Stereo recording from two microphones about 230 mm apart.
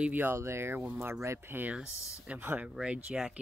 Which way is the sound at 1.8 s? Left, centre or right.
Centre.